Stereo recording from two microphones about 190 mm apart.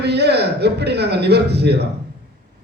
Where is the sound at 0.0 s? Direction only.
60° right (ahead or behind).